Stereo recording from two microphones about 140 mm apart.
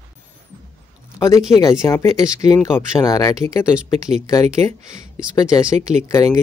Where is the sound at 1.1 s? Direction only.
20° left (ahead or behind).